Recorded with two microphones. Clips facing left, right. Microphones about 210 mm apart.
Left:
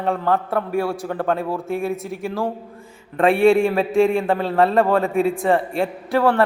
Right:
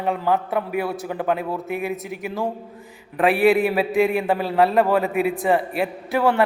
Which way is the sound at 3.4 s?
5° right (ahead or behind).